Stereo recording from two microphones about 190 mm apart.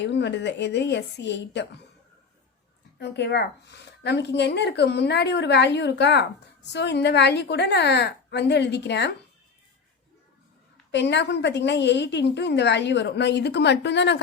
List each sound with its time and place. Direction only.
0.0 s a woman's voice: 65° left (ahead or behind)
3.0 s a woman's voice: 60° left (ahead or behind)
10.9 s a woman's voice: 65° left (ahead or behind)